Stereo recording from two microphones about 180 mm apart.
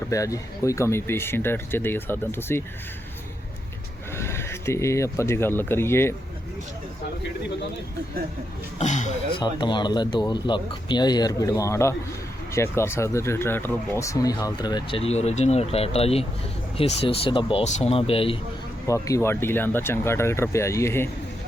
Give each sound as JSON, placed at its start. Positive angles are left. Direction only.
{"t": 0.1, "sound": "speech", "side_deg": 20}
{"t": 4.1, "sound": "speech", "side_deg": 15}
{"t": 8.8, "sound": "speech", "side_deg": 40}
{"t": 9.3, "sound": "speech", "side_deg": 25}
{"t": 18.9, "sound": "speech", "side_deg": 15}